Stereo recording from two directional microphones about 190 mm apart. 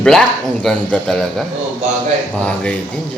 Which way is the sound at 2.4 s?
5° left (ahead or behind).